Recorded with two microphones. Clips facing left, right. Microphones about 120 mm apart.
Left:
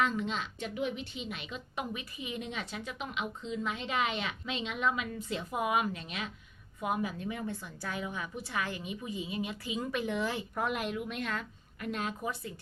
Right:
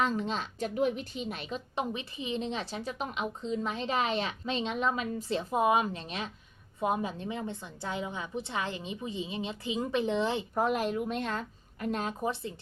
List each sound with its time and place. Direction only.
0.0 s a woman's voice: 35° right (ahead or behind)